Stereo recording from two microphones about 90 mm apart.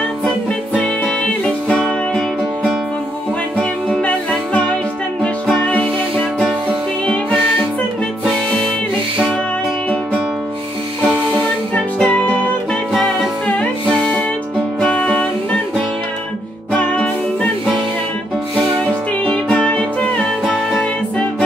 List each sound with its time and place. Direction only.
0.7 s music: 10° left (ahead or behind)
3.5 s music: 10° left (ahead or behind)
11.7 s music: 10° left (ahead or behind)
13.6 s music: 15° left (ahead or behind)
16.7 s music: 15° left (ahead or behind)
19.2 s music: 10° left (ahead or behind)